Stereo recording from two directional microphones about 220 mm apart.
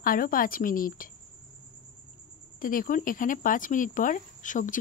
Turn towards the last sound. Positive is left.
turn(degrees=35)  # may be behind; listen again after turning